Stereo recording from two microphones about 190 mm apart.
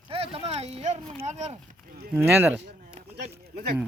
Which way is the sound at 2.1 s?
10° right (ahead or behind).